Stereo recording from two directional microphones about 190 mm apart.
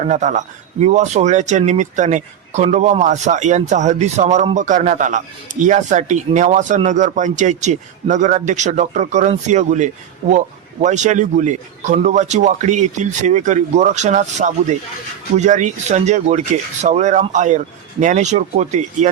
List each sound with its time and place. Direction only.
0.0 s speech: 40° right (ahead or behind)